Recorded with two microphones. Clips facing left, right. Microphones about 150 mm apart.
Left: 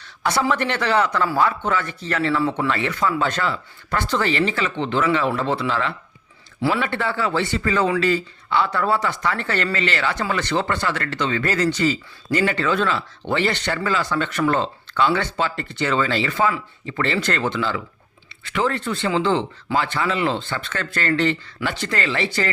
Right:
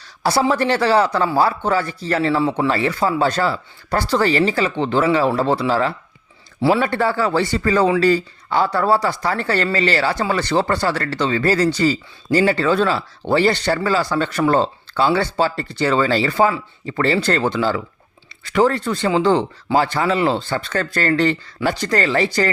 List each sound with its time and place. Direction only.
0.0 s speech: 35° right (ahead or behind)